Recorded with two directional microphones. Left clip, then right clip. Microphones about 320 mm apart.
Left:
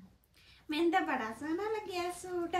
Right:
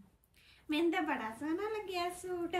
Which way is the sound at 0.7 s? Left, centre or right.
Centre.